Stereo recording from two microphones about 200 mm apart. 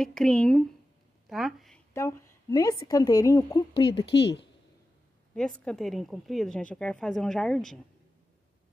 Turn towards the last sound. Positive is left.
turn(degrees=0)  # may be behind; listen again after turning